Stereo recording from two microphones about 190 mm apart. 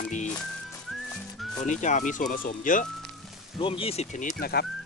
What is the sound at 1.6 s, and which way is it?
Speech, 40° left (ahead or behind).